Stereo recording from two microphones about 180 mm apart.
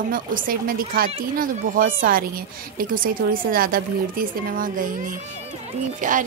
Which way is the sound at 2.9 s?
50° right (ahead or behind).